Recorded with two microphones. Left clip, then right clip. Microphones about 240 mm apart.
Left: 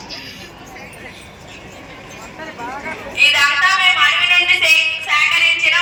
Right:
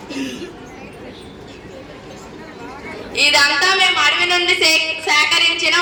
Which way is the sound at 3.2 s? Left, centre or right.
Right.